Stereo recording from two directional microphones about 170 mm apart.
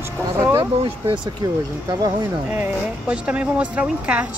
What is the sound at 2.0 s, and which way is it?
Speech, 10° right (ahead or behind).